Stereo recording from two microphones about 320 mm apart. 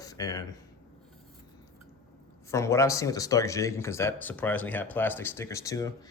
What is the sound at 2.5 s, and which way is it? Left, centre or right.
Speech, centre.